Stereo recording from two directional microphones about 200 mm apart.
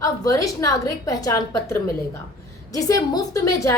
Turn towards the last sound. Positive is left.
turn(degrees=15)  # may be behind; listen again after turning